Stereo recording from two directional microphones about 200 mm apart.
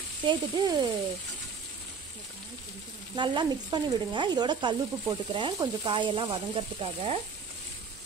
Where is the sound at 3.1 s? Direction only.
20° right (ahead or behind).